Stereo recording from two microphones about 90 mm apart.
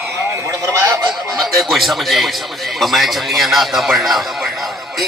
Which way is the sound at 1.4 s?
Centre (ahead or behind).